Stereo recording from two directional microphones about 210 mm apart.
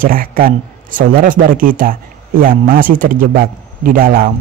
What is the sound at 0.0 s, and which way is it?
A man's voice, 40° right (ahead or behind).